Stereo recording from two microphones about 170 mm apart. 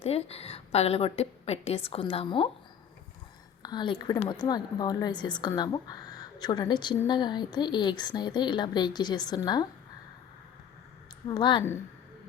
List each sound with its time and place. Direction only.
0.0 s a woman's voice: 35° left (ahead or behind)
3.6 s a woman's voice: 25° left (ahead or behind)
11.3 s speech: 25° left (ahead or behind)